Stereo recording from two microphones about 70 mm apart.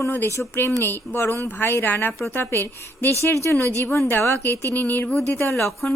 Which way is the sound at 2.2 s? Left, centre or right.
Left.